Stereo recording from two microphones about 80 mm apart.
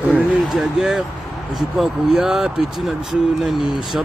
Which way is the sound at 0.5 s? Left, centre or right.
Centre.